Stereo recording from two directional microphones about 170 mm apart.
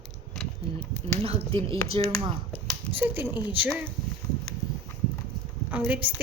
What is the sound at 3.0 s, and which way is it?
Speech, 10° right (ahead or behind).